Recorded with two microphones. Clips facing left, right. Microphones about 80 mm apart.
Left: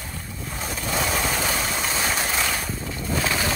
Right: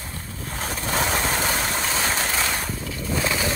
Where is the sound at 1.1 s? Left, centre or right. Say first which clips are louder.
Right 1 dB; centre.